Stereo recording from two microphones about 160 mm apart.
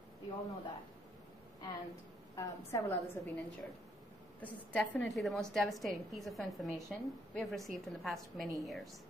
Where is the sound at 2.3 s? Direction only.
20° left (ahead or behind).